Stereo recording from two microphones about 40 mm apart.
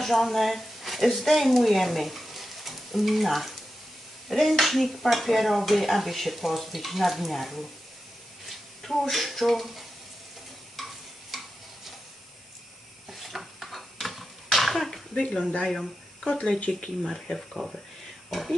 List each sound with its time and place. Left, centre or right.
0.0 s speech: centre
4.3 s dishes: centre
8.5 s speech: centre
10.8 s stir: centre
11.3 s tick-tock: centre
13.2 s a sound: centre
15.1 s speech: left
15.6 s speech: centre
17.6 s speech: centre